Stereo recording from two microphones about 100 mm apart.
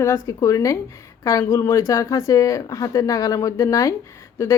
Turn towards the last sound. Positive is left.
turn(degrees=25)  # may be behind; listen again after turning